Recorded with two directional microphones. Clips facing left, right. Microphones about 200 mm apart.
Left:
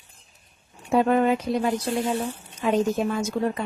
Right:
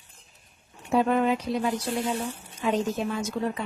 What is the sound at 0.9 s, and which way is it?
Speech, 50° left (ahead or behind).